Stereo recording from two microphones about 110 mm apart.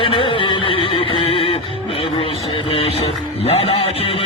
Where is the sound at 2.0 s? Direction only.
55° left (ahead or behind).